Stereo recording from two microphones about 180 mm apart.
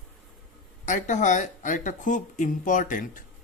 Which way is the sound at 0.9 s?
45° left (ahead or behind).